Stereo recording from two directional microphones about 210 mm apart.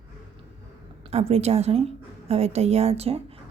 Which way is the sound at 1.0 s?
30° right (ahead or behind).